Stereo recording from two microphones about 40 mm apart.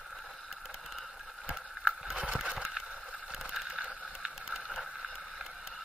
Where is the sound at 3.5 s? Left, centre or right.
Centre.